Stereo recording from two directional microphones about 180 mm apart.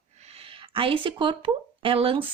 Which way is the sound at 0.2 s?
35° right (ahead or behind).